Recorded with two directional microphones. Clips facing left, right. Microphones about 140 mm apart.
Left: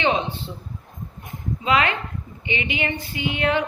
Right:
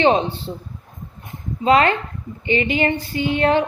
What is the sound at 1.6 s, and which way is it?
A woman's voice, 40° right (ahead or behind).